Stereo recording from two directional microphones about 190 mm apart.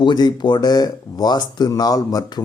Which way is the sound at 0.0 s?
20° left (ahead or behind).